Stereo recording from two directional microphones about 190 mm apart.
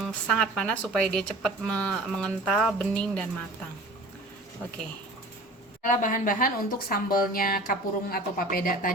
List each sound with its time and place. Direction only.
0.0 s speech: 5° left (ahead or behind)
5.8 s speech: 45° left (ahead or behind)